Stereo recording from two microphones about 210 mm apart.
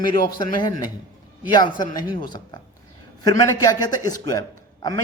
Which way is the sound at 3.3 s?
15° left (ahead or behind).